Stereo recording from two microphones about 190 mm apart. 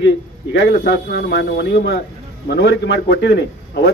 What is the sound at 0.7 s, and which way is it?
A man's voice, 60° left (ahead or behind).